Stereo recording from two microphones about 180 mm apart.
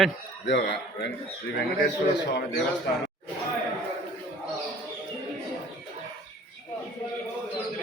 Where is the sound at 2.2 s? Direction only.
75° left (ahead or behind).